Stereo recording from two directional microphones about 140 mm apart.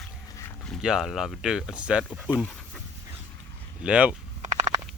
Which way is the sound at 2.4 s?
5° left (ahead or behind).